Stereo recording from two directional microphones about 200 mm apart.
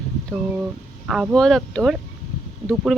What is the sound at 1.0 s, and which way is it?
Speech, 5° right (ahead or behind).